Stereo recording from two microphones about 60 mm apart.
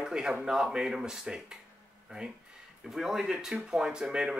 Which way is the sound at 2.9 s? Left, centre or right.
Centre.